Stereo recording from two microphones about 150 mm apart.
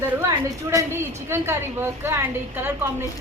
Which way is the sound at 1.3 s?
15° right (ahead or behind).